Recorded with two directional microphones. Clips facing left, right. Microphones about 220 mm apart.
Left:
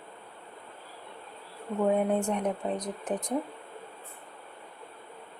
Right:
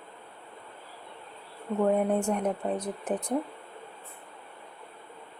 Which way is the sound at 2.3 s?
5° right (ahead or behind).